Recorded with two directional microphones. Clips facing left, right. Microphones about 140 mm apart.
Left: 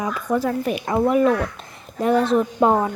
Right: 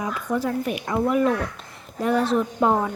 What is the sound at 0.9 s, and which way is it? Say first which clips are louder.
Speech: left 4 dB; 25° left (ahead or behind).